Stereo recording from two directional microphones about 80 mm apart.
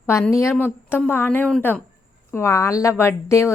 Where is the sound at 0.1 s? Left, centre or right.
Left.